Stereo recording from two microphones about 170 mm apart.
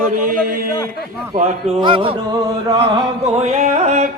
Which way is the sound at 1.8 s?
30° right (ahead or behind).